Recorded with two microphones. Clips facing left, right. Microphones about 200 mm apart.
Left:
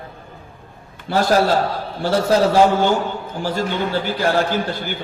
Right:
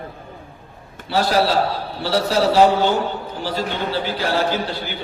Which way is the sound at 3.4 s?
50° left (ahead or behind).